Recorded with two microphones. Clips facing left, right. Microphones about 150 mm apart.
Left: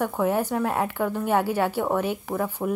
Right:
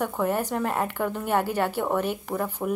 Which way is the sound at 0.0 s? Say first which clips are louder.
Left 2 dB; 10° left (ahead or behind).